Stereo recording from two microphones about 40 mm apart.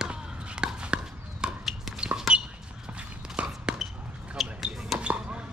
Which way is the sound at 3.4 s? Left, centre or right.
Right.